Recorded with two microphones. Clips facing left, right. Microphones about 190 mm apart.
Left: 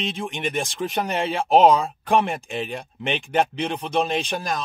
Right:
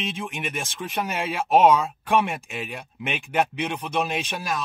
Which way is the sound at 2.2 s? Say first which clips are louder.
Left 2 dB; 5° right (ahead or behind).